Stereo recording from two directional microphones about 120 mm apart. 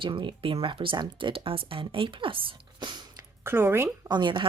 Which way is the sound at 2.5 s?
40° right (ahead or behind).